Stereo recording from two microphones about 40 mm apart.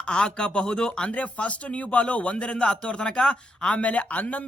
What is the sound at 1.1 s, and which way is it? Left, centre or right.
Speech, left.